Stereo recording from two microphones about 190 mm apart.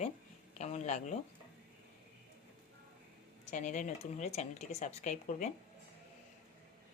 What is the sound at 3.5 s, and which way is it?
Speech, 40° left (ahead or behind).